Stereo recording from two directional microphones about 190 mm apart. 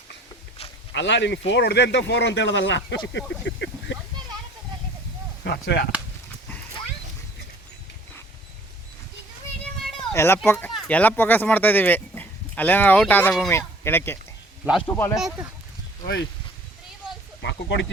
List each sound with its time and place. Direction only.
0.9 s speech: 70° left (ahead or behind)
5.4 s speech: 60° left (ahead or behind)
10.1 s a child's voice: 10° left (ahead or behind)
17.4 s speech: 70° left (ahead or behind)